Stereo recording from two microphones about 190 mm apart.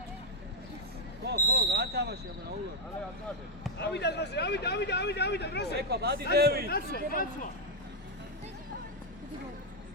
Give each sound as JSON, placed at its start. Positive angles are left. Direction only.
{"t": 1.2, "sound": "speech", "side_deg": -60}
{"t": 3.8, "sound": "speech", "side_deg": 60}
{"t": 5.9, "sound": "speech", "side_deg": -60}
{"t": 6.7, "sound": "speech", "side_deg": 55}